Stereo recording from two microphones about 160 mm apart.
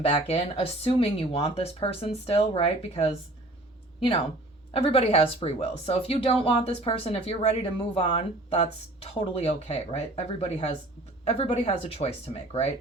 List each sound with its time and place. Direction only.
0.0 s speech: 35° left (ahead or behind)
4.7 s speech: 35° left (ahead or behind)